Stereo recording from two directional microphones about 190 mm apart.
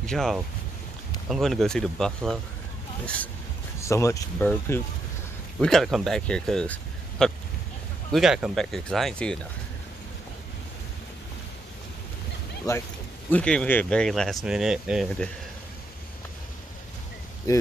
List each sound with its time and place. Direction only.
0.0 s speech: 5° left (ahead or behind)
3.8 s speech: 15° left (ahead or behind)
12.7 s speech: 15° left (ahead or behind)
13.3 s speech: 5° left (ahead or behind)
17.5 s speech: 15° left (ahead or behind)